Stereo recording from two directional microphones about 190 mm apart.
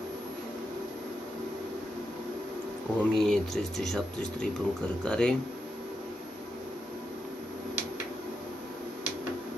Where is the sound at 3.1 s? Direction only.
Centre (ahead or behind).